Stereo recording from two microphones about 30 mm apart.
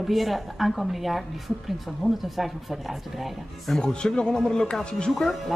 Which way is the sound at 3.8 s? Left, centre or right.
Left.